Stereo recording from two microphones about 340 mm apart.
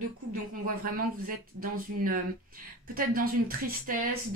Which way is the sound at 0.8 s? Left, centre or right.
Right.